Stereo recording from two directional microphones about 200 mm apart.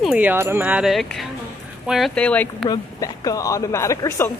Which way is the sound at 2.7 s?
15° left (ahead or behind).